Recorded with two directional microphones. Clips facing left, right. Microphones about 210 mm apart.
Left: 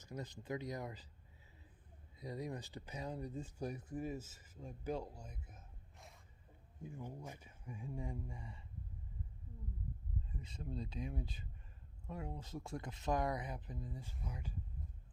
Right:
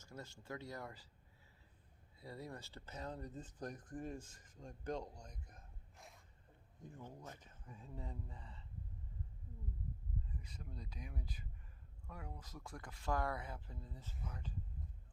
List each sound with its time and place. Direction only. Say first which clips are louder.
0.0 s speech: left 5 dB; 15° left (ahead or behind)
2.1 s speech: left 5 dB; 15° left (ahead or behind)
10.3 s speech: left 7 dB; 25° left (ahead or behind)